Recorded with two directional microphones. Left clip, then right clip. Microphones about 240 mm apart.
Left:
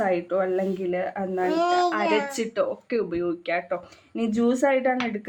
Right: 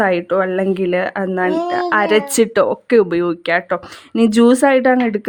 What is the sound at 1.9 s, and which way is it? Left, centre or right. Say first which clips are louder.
Speech: right 10 dB; right.